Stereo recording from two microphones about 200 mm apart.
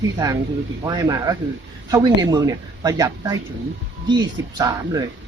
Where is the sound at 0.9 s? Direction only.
20° right (ahead or behind).